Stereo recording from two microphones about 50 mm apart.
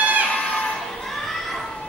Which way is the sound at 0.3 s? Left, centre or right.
Left.